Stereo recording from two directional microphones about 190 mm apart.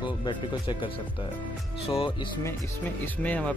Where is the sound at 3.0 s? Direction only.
10° left (ahead or behind).